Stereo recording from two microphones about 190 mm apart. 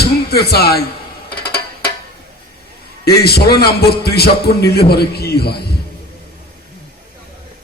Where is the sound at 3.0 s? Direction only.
55° left (ahead or behind).